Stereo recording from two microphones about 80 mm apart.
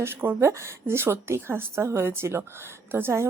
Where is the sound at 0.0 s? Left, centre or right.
Right.